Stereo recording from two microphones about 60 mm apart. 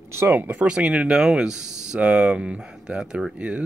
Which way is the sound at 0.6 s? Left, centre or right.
Centre.